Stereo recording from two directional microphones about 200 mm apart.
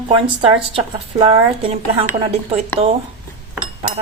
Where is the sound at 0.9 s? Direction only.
30° right (ahead or behind).